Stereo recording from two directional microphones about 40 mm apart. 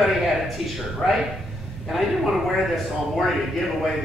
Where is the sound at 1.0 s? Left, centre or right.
Centre.